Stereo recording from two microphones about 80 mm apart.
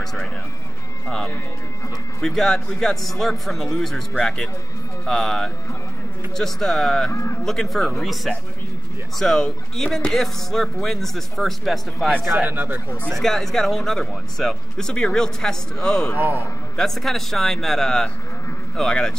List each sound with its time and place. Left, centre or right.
0.0 s music: centre
1.0 s speech: centre
7.1 s speech: left
7.4 s speech: centre
12.4 s speech: right
13.1 s speech: centre
16.2 s speech: right
16.7 s speech: centre